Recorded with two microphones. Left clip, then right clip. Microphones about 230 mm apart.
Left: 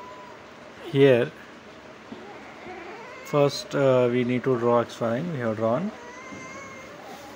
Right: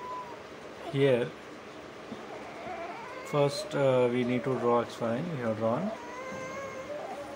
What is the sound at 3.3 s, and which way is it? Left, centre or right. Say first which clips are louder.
Speech: left 6 dB; centre.